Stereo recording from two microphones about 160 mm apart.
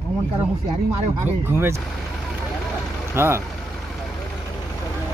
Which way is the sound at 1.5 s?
15° right (ahead or behind).